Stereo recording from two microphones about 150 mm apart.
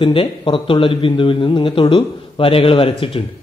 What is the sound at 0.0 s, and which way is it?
Speech, 35° left (ahead or behind).